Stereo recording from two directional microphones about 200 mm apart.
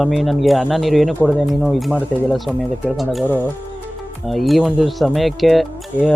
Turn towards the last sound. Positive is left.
turn(degrees=0)  # may be behind; listen again after turning